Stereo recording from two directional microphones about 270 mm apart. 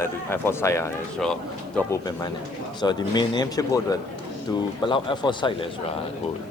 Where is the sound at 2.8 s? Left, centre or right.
Centre.